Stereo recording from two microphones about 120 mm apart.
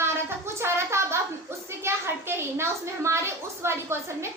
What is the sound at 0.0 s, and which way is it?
A woman's voice, 20° right (ahead or behind).